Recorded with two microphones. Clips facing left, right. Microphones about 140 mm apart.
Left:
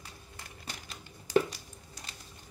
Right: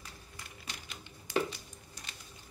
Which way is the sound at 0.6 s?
35° left (ahead or behind).